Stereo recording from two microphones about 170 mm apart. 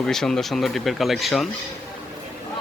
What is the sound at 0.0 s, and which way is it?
Speech, 5° left (ahead or behind).